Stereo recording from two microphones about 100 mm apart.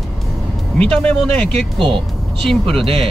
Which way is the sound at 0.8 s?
10° left (ahead or behind).